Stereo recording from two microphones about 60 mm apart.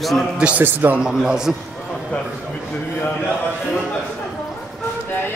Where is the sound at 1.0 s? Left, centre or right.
Centre.